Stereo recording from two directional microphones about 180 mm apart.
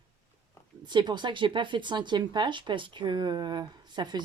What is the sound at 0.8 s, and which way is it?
Speech, 25° right (ahead or behind).